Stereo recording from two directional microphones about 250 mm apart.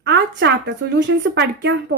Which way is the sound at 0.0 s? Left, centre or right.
Right.